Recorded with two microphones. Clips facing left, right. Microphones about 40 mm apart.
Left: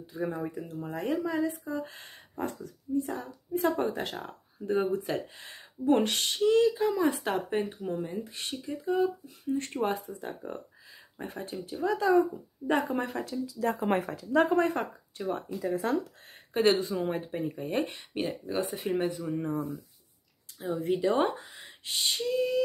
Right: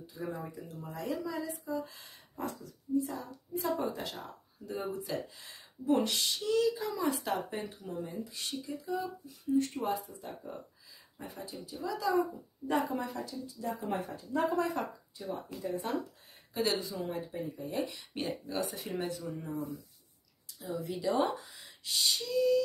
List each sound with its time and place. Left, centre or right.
0.3 s speech: left
14.5 s speech: left
16.5 s speech: left
18.8 s speech: left
19.3 s speech: left